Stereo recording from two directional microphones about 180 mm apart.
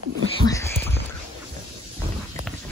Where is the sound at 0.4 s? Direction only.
15° left (ahead or behind).